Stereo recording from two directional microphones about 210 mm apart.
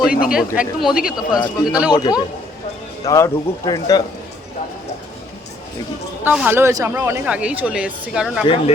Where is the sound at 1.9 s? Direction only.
20° left (ahead or behind).